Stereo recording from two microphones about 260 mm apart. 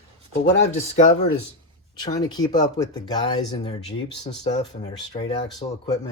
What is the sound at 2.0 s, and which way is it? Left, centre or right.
Speech, centre.